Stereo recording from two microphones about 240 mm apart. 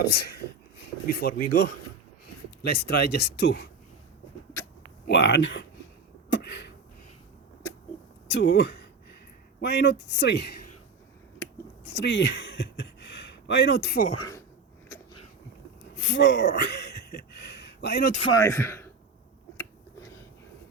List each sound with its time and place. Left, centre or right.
0.0 s speech: left
5.0 s speech: left
6.3 s a sound: left
8.3 s speech: left
11.9 s a sound: left
14.2 s speech: centre
16.0 s a sound: left
18.3 s a man's voice: centre
19.5 s finger snapping: centre